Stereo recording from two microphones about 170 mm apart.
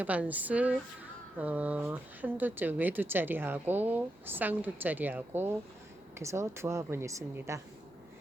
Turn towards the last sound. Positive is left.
turn(degrees=-15)  # may be behind; listen again after turning